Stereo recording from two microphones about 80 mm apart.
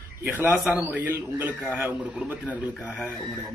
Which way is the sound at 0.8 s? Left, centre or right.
Right.